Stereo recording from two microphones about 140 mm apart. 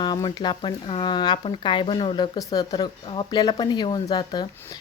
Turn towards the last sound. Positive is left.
turn(degrees=30)  # may be behind; listen again after turning